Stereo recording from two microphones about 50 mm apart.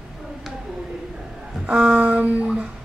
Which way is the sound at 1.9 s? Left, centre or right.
Right.